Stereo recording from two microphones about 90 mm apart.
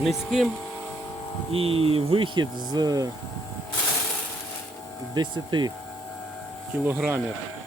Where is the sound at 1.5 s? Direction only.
90° right; by 3.1 s 45° right (ahead or behind).